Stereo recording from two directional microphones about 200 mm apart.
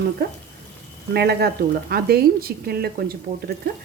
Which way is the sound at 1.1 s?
55° right (ahead or behind).